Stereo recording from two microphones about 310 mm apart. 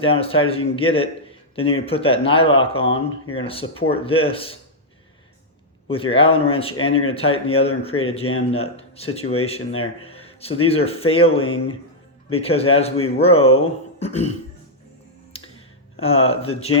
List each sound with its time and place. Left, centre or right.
0.0 s speech: centre
5.9 s speech: centre
12.3 s speech: centre
16.0 s speech: centre